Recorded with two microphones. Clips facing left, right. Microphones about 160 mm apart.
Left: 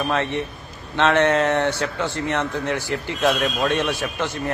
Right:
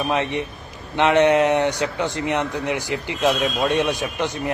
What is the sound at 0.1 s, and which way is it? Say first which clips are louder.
A man's voice: right 1 dB; 15° right (ahead or behind).